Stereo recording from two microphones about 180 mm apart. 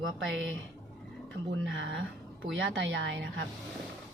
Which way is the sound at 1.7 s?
90° right.